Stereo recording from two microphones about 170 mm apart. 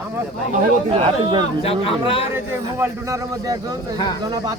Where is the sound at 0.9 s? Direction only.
30° right (ahead or behind).